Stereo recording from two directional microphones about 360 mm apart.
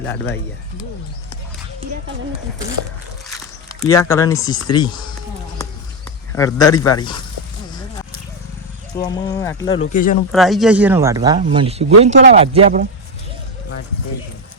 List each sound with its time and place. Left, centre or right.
3.2 s speech: centre
6.3 s speech: centre
9.0 s speech: centre
9.9 s speech: left
10.3 s speech: centre